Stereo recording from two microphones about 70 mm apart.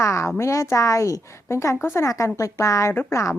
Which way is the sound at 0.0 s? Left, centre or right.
Left.